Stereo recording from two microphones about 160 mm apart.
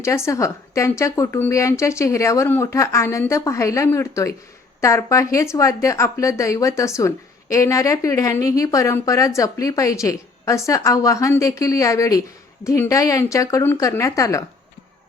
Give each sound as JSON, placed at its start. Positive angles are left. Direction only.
{"t": 0.0, "sound": "a woman's voice", "side_deg": 20}